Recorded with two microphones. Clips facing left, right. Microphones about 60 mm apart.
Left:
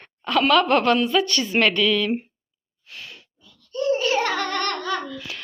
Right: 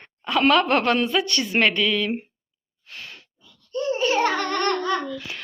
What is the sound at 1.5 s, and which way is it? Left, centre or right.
Speech, right.